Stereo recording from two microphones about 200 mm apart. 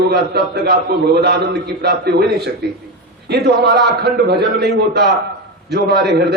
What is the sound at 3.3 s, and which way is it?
A man's voice, 55° right (ahead or behind).